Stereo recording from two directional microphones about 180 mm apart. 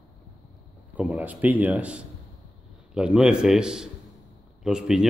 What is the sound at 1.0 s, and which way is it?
A man's voice, 10° right (ahead or behind).